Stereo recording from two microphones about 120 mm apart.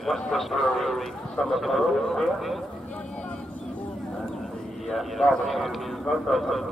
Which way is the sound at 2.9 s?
10° left (ahead or behind).